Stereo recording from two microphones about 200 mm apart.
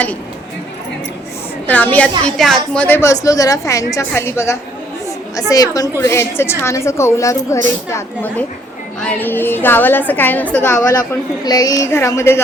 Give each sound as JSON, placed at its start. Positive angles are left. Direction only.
{"t": 1.6, "sound": "a woman's voice", "side_deg": 10}